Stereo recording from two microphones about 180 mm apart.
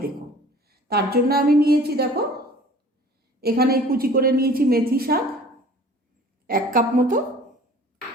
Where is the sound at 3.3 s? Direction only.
60° right (ahead or behind).